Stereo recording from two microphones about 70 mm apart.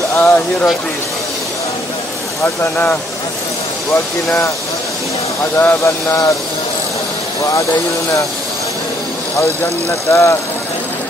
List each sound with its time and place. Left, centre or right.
0.2 s speech: left
2.4 s speech: left
5.4 s speech: left
9.4 s speech: left